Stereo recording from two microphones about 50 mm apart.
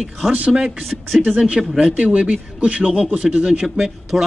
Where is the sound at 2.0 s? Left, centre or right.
Right; by 4.2 s centre.